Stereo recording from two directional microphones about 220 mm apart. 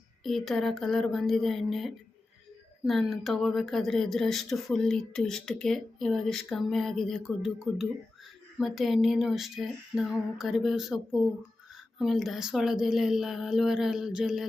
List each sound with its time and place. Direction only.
0.2 s speech: centre (ahead or behind)